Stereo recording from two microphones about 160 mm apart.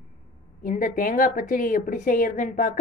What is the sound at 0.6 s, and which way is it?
Speech, 60° left (ahead or behind).